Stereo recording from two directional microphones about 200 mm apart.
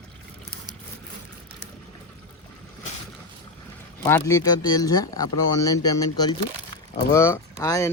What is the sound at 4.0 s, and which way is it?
Speech, 15° left (ahead or behind).